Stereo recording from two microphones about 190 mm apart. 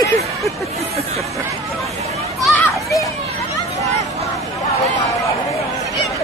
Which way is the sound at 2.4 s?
Centre (ahead or behind).